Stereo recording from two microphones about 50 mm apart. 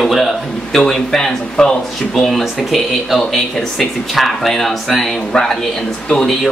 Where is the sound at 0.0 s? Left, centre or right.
Centre.